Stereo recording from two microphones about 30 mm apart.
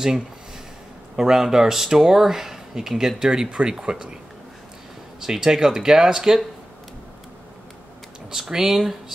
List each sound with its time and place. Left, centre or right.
1.1 s speech: centre
3.2 s speech: right
3.4 s speech: right
5.2 s speech: centre
8.3 s speech: centre